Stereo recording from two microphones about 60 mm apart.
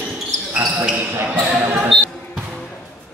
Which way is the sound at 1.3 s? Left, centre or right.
Right.